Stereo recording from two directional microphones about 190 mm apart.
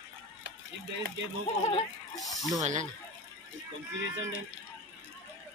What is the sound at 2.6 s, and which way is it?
Speech, 40° right (ahead or behind).